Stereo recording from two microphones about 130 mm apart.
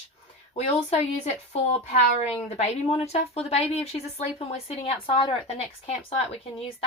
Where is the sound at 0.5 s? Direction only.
60° left (ahead or behind).